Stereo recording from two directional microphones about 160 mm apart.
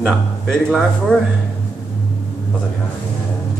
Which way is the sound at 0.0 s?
5° left (ahead or behind).